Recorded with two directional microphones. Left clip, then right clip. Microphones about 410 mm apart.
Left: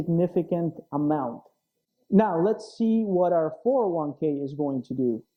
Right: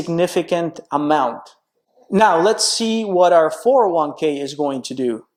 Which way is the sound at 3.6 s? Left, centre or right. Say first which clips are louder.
Right 10 dB; centre.